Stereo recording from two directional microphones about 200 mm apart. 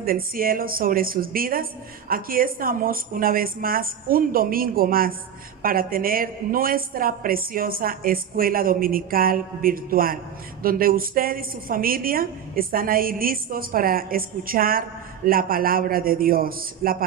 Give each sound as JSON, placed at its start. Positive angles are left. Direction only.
{"t": 0.0, "sound": "a woman's voice", "side_deg": -45}